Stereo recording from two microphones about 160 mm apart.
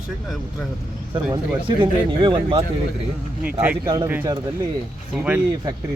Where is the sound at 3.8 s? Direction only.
25° right (ahead or behind).